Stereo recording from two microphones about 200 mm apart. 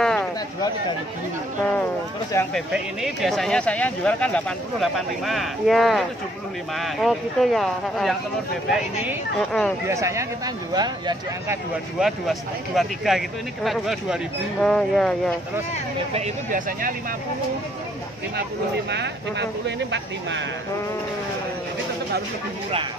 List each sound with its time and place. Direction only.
0.0 s a sound: 5° left (ahead or behind)
2.5 s speech: centre (ahead or behind)
9.8 s speech: 15° right (ahead or behind)
12.0 s speech: centre (ahead or behind)
16.1 s speech: 35° right (ahead or behind)
18.9 s speech: 60° right (ahead or behind)